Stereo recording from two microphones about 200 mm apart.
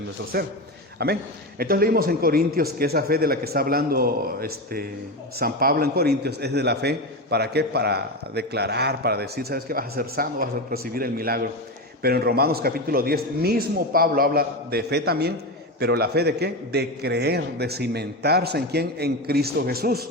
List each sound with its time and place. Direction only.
0.9 s a man's voice: 50° right (ahead or behind)